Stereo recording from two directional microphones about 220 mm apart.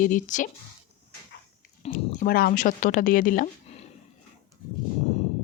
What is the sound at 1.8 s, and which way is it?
Speech, 35° left (ahead or behind).